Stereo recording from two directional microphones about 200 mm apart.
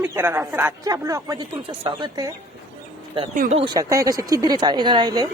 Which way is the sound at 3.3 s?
40° right (ahead or behind).